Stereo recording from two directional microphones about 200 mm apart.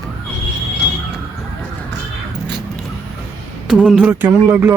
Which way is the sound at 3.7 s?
5° right (ahead or behind).